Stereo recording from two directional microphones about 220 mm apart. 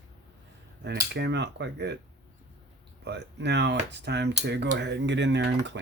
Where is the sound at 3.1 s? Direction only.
50° right (ahead or behind).